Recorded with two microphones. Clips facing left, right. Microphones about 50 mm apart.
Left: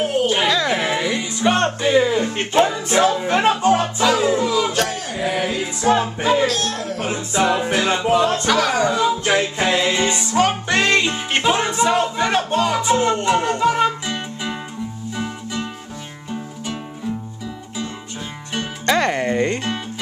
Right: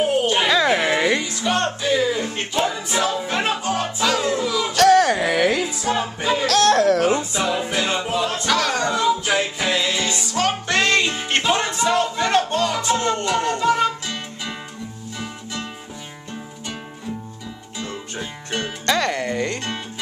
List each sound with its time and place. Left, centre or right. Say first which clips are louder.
0.0 s a sound: even; centre
1.2 s music: left 4 dB; left
3.8 s music: left 4 dB; centre
4.5 s a sound: left 3 dB; centre
4.7 s a sound: right 8 dB; right
6.1 s music: left 4 dB; left
6.4 s a sound: right 6 dB; right
7.3 s music: left 4 dB; left
8.5 s music: left 3 dB; centre
9.2 s music: left 3 dB; left
10.3 s music: left 2 dB; centre
18.9 s music: left 3 dB; left